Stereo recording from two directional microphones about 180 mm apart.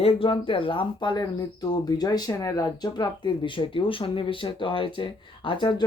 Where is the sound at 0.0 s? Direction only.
30° left (ahead or behind).